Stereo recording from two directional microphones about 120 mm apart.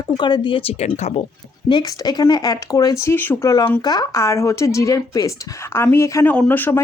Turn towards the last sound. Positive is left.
turn(degrees=15)  # may be behind; listen again after turning